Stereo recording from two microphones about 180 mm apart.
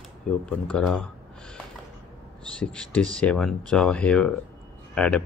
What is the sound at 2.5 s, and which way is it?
Speech, 5° left (ahead or behind).